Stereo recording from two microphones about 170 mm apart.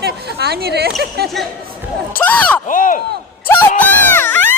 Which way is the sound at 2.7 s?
50° left (ahead or behind).